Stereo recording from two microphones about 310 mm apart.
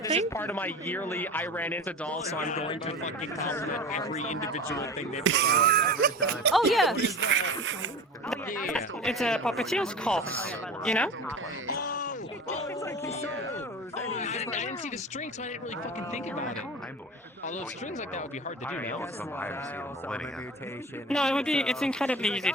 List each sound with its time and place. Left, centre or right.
0.3 s a man's voice: centre
2.4 s speech: left
4.7 s speech: centre
5.2 s speech: right
6.5 s a man's voice: centre
6.9 s speech: right
8.7 s a man's voice: centre
11.7 s a sound: left
18.7 s a man's voice: centre
21.1 s a man's voice: centre